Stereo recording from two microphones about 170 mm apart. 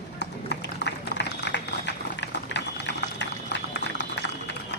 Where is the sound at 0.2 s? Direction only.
85° left.